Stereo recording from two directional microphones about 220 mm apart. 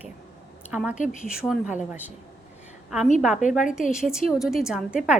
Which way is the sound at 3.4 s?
35° left (ahead or behind).